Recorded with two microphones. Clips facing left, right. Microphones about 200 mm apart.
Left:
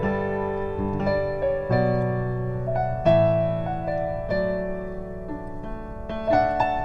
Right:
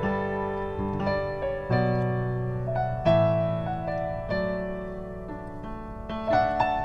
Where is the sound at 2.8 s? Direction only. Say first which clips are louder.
Left 3 dB; 50° left (ahead or behind).